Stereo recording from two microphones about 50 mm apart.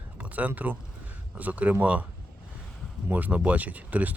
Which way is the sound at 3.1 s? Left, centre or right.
Right.